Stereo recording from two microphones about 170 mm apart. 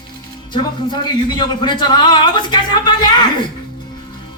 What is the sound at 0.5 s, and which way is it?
A man's voice, 25° left (ahead or behind).